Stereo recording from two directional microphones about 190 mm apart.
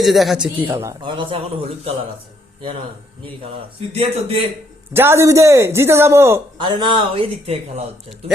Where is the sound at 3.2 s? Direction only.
30° right (ahead or behind).